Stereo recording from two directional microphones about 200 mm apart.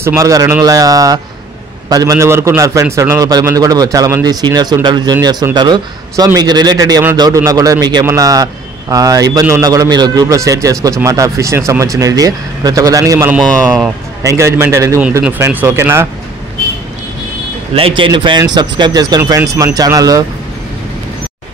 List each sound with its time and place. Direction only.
0.0 s a man's voice: 15° right (ahead or behind)
13.4 s speech: centre (ahead or behind)
14.2 s a man's voice: 15° right (ahead or behind)
17.7 s speech: 25° right (ahead or behind)